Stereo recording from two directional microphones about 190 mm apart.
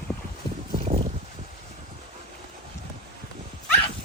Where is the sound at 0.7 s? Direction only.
30° right (ahead or behind).